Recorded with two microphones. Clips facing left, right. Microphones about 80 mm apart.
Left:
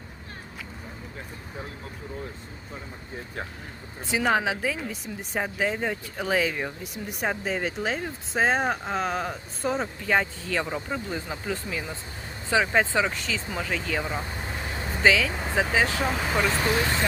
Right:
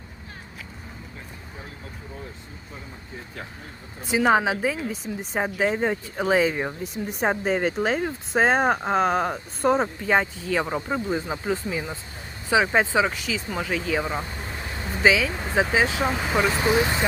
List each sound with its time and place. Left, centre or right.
4.0 s speech: right
10.1 s speech: centre
14.3 s vehicle: centre
15.0 s speech: centre
16.0 s speech: centre